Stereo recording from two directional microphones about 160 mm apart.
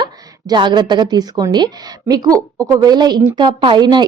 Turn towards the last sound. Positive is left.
turn(degrees=-25)  # may be behind; listen again after turning